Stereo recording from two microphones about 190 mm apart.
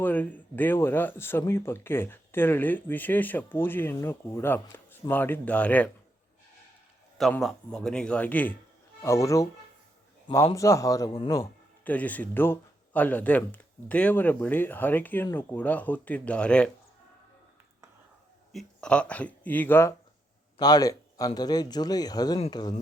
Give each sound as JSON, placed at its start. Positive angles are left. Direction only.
{"t": 0.0, "sound": "speech", "side_deg": 10}
{"t": 7.2, "sound": "a man's voice", "side_deg": 0}
{"t": 11.9, "sound": "speech", "side_deg": 10}
{"t": 18.5, "sound": "speech", "side_deg": 5}